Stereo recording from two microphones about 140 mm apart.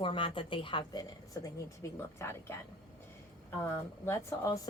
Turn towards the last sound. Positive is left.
turn(degrees=25)  # may be behind; listen again after turning